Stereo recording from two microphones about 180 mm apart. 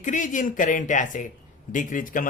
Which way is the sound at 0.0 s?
45° left (ahead or behind).